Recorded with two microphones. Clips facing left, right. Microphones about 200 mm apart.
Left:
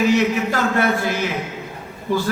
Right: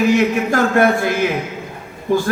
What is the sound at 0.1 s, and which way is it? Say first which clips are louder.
A man's voice: right 3 dB; 50° right (ahead or behind).